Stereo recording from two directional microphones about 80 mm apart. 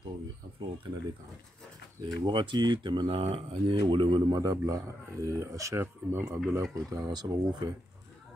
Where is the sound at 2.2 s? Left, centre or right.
Right.